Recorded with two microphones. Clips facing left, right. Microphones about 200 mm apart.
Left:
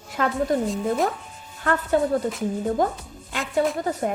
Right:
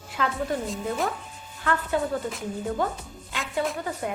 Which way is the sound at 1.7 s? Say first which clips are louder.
Left 5 dB; 40° left (ahead or behind).